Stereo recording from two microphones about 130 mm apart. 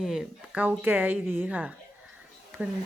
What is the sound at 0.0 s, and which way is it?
Speech, 5° right (ahead or behind).